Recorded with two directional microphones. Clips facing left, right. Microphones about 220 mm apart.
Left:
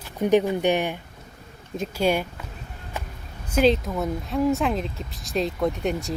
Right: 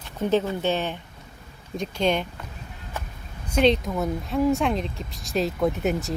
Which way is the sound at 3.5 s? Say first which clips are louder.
Even; 5° left (ahead or behind).